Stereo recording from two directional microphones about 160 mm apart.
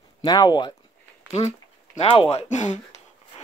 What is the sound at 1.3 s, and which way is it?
Speech, 45° left (ahead or behind).